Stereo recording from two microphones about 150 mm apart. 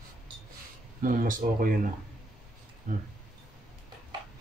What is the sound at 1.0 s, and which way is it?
Speech, 65° right (ahead or behind).